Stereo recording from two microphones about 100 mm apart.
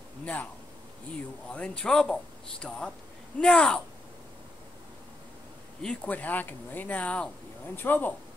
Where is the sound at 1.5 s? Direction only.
10° left (ahead or behind).